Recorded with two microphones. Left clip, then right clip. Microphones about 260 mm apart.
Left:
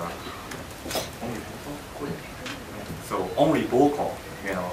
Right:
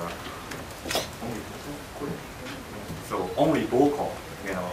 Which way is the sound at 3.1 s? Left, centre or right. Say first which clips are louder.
Left 1 dB; centre.